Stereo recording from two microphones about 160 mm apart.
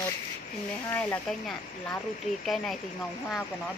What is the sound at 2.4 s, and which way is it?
Speech, centre (ahead or behind).